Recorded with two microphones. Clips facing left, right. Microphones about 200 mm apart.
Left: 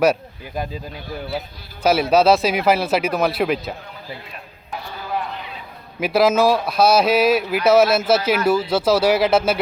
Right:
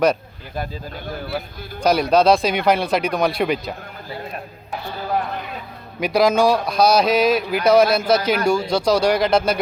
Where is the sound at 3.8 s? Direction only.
45° right (ahead or behind).